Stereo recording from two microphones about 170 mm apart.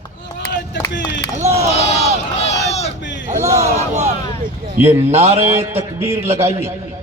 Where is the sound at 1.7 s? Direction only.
40° left (ahead or behind).